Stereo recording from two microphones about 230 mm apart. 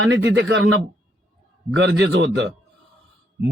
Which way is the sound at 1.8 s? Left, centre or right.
Right.